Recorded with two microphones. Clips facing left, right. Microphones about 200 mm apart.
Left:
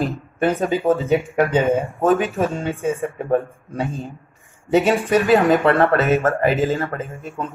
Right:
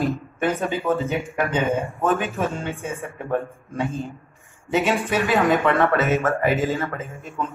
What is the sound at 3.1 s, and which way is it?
Speech, 40° left (ahead or behind).